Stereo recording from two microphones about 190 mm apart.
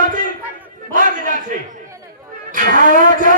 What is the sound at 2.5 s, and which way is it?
Music, 45° right (ahead or behind).